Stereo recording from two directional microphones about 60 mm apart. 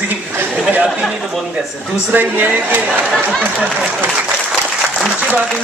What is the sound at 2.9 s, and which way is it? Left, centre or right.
Speech, centre.